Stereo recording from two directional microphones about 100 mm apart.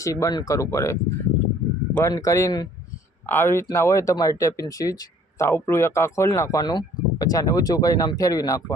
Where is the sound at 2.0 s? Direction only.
35° left (ahead or behind).